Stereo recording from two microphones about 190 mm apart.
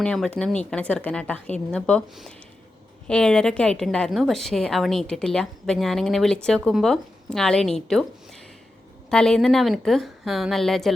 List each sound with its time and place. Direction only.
0.0 s a woman's voice: 5° left (ahead or behind)